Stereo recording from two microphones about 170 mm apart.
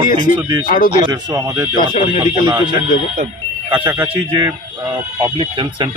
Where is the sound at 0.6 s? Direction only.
55° left (ahead or behind).